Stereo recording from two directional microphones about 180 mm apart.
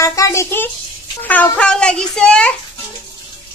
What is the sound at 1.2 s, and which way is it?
A child's voice, 10° left (ahead or behind).